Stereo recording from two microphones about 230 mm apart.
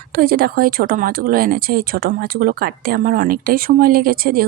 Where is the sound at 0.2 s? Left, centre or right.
Right.